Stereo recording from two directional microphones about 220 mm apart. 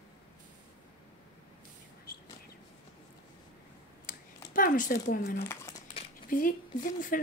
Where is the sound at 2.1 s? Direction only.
45° left (ahead or behind).